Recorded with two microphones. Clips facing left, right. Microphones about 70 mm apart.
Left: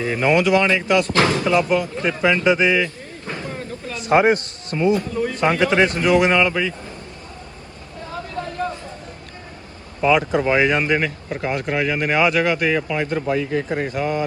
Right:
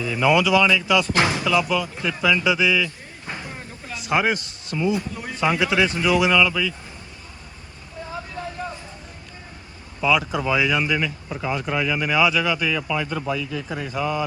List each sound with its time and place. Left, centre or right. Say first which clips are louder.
0.0 s speech: left 1 dB; left
1.1 s speech: left 3 dB; centre
1.4 s speech: left 3 dB; left
3.2 s a sound: left 5 dB; centre
4.0 s speech: left 6 dB; left
10.0 s speech: left 4 dB; left